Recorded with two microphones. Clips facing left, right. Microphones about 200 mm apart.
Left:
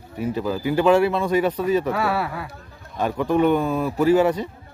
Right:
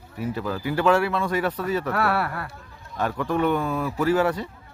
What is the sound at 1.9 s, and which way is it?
Speech, centre (ahead or behind).